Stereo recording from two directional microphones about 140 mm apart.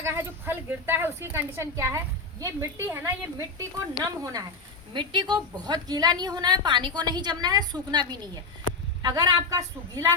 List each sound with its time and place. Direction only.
0.0 s a woman's voice: 20° right (ahead or behind)